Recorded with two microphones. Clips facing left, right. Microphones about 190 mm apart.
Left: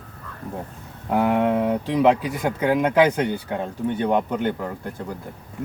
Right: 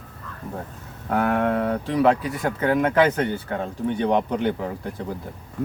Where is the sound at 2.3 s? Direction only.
15° left (ahead or behind).